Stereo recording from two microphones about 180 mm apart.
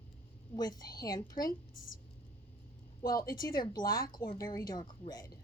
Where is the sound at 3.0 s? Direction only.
20° left (ahead or behind).